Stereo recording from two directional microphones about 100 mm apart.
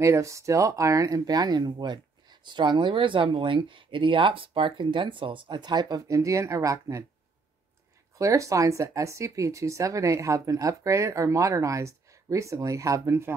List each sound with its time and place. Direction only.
0.0 s speech: 30° right (ahead or behind)
8.2 s speech: 30° right (ahead or behind)